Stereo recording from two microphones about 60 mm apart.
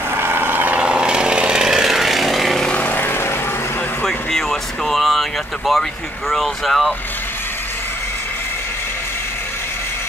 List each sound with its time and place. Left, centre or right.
0.1 s vehicle: right
0.7 s chainsaw: centre
2.7 s vehicle: left
4.0 s a sound: centre
5.7 s speech: centre